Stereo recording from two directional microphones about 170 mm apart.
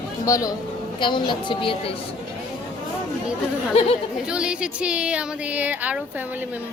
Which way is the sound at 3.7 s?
35° left (ahead or behind).